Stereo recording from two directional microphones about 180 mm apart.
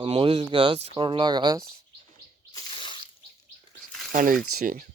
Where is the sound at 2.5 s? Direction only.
25° left (ahead or behind).